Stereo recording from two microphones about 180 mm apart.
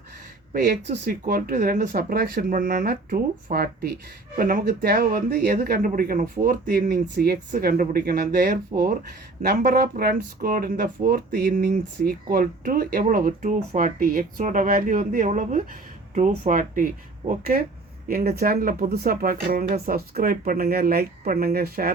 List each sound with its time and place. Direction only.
0.5 s speech: 50° right (ahead or behind)